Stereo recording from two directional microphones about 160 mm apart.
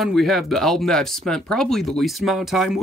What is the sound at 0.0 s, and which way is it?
Speech, centre (ahead or behind).